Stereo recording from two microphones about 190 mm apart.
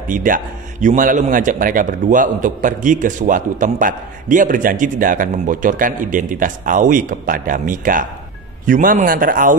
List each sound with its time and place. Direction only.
0.1 s a man's voice: 45° right (ahead or behind)